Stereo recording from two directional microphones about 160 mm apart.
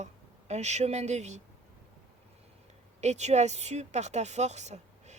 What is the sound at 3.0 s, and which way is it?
Speech, 45° right (ahead or behind).